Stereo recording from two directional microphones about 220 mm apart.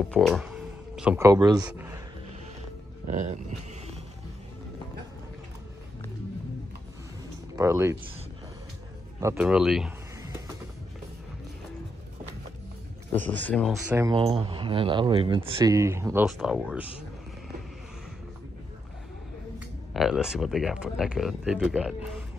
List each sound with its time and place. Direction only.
0.1 s speech: centre (ahead or behind); by 1.6 s 15° right (ahead or behind)
1.6 s a man's voice: 5° right (ahead or behind)
3.1 s speech: 35° right (ahead or behind)
7.5 s speech: 10° right (ahead or behind)
9.2 s speech: 10° right (ahead or behind)
13.1 s speech: 5° left (ahead or behind)
13.9 s speech: 20° right (ahead or behind)
16.3 s speech: centre (ahead or behind)
19.9 s speech: centre (ahead or behind)